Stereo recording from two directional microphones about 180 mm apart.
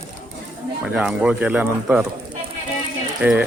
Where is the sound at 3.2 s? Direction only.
5° right (ahead or behind).